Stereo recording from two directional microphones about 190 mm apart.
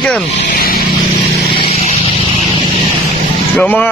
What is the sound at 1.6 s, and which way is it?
Vehicle, 35° left (ahead or behind).